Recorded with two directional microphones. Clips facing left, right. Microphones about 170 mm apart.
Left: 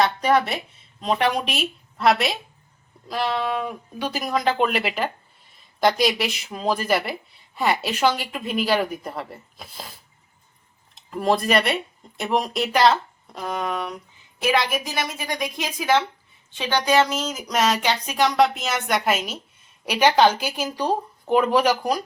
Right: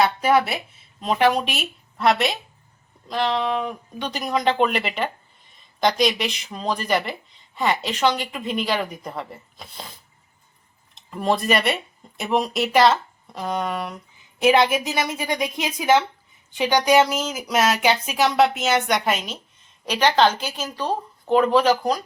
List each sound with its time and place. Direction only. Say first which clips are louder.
0.0 s speech: right 1 dB; 5° right (ahead or behind)
10.9 s speech: left 1 dB; centre (ahead or behind)
14.4 s a woman's voice: right 5 dB; 25° right (ahead or behind); by 22.0 s 10° left (ahead or behind)